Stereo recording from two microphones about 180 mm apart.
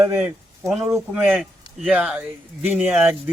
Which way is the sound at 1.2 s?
Centre (ahead or behind).